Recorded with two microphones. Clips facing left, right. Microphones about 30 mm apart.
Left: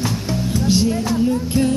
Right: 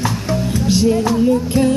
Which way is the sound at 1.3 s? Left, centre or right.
Centre.